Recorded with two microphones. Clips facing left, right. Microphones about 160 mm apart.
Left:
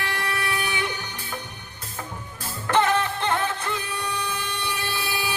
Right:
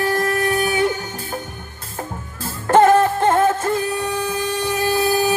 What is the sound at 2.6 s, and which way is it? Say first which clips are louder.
Music: right 9 dB; 45° right (ahead or behind).